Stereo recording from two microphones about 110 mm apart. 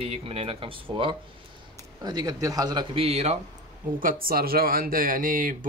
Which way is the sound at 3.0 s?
75° right (ahead or behind).